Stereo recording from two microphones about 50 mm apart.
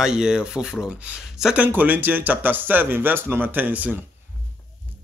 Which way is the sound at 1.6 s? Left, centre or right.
Right.